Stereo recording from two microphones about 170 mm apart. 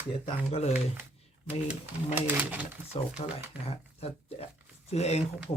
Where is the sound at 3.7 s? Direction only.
35° left (ahead or behind).